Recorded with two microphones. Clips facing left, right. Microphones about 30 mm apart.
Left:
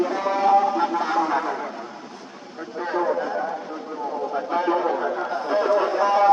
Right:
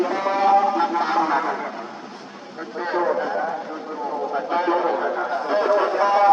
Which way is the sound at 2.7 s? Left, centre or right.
Right.